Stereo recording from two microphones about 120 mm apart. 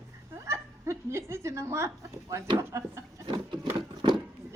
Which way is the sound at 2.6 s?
25° right (ahead or behind).